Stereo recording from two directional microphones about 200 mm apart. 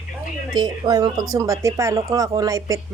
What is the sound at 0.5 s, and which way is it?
Speech, 20° right (ahead or behind).